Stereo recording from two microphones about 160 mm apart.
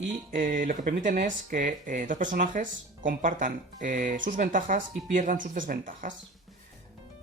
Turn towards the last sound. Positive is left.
turn(degrees=-55)  # may be behind; listen again after turning